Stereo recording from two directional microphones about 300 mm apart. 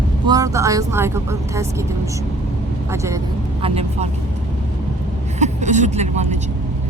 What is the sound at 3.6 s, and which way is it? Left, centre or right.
Speech, centre.